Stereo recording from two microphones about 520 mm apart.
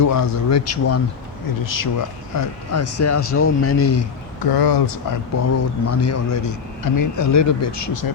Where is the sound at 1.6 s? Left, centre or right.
Left.